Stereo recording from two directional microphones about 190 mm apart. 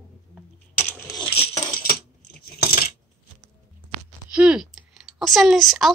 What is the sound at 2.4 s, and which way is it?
Coin, 55° left (ahead or behind).